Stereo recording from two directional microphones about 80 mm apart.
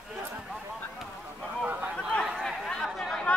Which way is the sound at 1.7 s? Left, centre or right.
Right.